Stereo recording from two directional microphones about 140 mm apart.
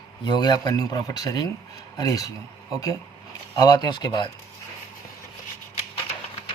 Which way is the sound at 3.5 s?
30° left (ahead or behind).